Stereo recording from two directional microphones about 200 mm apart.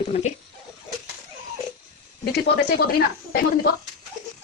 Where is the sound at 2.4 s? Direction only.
55° left (ahead or behind).